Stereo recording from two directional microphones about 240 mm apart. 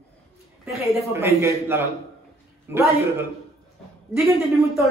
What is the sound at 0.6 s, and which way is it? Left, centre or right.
Speech, centre.